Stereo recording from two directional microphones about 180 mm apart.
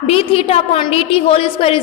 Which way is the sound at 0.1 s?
30° left (ahead or behind).